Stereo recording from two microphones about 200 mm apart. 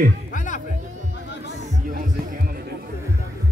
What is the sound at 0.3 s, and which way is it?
Music, 40° left (ahead or behind).